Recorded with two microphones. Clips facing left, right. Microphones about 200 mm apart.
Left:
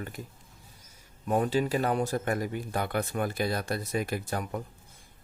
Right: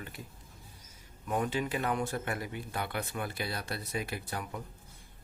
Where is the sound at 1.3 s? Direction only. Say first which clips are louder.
Left 6 dB; 35° left (ahead or behind).